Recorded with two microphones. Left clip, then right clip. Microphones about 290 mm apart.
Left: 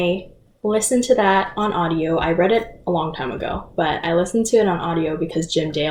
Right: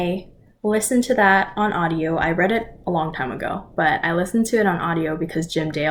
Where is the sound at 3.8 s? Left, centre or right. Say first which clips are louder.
Even; right.